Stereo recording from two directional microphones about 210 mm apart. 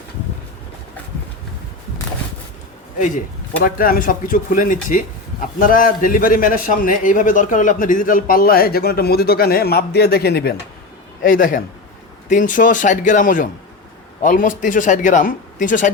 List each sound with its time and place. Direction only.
3.6 s speech: 40° left (ahead or behind)